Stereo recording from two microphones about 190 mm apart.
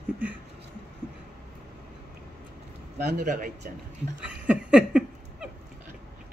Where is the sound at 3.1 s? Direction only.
45° right (ahead or behind).